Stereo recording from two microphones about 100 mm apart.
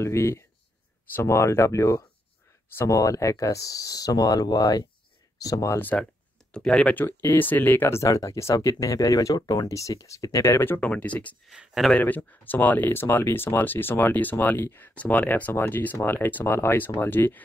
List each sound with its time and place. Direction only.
0.0 s speech: 30° left (ahead or behind)
6.5 s speech: 5° left (ahead or behind)
11.4 s speech: 5° right (ahead or behind)
11.9 s speech: 15° left (ahead or behind)